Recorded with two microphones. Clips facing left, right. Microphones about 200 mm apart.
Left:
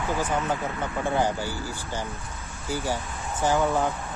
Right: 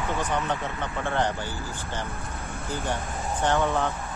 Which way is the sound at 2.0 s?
55° right (ahead or behind).